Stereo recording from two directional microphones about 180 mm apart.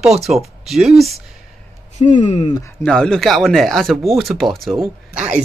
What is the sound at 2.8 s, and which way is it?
Speech, 5° left (ahead or behind).